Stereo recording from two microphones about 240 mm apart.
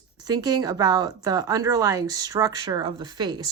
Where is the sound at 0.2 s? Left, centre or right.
Centre.